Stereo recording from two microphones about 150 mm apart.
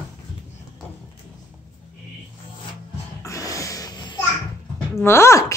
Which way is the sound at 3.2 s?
20° left (ahead or behind).